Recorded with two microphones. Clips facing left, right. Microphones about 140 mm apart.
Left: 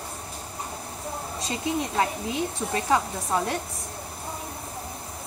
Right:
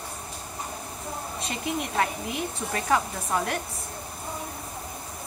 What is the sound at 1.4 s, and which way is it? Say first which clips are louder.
A woman's voice: left 3 dB; 30° left (ahead or behind).